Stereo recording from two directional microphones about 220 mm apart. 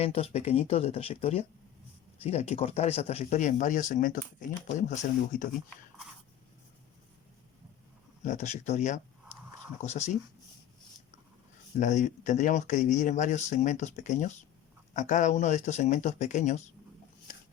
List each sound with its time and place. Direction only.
0.0 s speech: 25° left (ahead or behind)
8.2 s speech: 30° left (ahead or behind)
11.8 s speech: 35° left (ahead or behind)